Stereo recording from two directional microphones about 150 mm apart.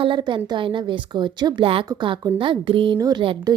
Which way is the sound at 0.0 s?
30° right (ahead or behind).